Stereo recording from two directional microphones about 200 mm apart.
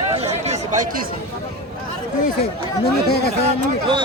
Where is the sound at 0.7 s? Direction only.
45° right (ahead or behind).